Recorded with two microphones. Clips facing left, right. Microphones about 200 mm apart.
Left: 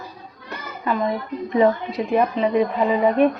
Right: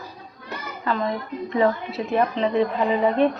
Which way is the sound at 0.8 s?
15° left (ahead or behind).